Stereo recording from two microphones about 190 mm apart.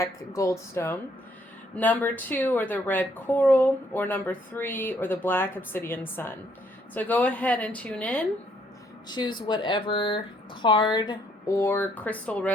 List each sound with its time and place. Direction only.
0.0 s speech: 15° left (ahead or behind)
9.0 s speech: 25° left (ahead or behind); by 12.5 s 5° left (ahead or behind)